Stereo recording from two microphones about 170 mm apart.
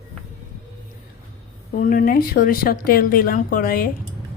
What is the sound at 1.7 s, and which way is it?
Speech, 55° left (ahead or behind).